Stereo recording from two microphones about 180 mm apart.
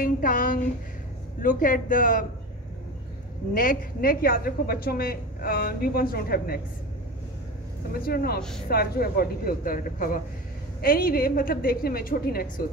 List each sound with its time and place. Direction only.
0.0 s speech: 50° left (ahead or behind)
3.5 s a woman's voice: 50° left (ahead or behind)
8.0 s a woman's voice: 55° left (ahead or behind)
8.4 s speech: 5° left (ahead or behind)
8.6 s a woman's voice: 60° left (ahead or behind)